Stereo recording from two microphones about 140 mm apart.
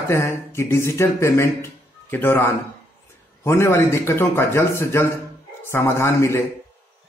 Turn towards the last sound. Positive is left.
turn(degrees=20)  # may be behind; listen again after turning